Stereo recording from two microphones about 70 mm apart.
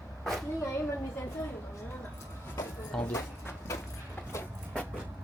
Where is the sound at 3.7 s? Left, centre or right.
Left.